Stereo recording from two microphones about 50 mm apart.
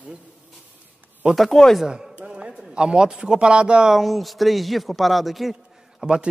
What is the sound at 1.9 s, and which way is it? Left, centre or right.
A man's voice, right.